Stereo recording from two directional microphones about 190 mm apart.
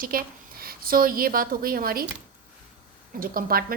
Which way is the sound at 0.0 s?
50° right (ahead or behind).